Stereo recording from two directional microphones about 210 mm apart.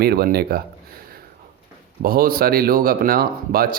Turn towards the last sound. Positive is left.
turn(degrees=-45)  # may be behind; listen again after turning